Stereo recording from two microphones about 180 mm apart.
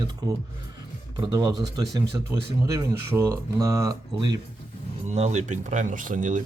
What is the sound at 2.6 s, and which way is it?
Speech, 20° right (ahead or behind).